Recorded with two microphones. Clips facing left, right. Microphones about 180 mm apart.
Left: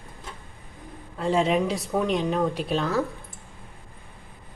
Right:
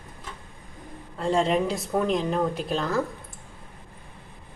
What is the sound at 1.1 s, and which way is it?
A woman's voice, centre (ahead or behind).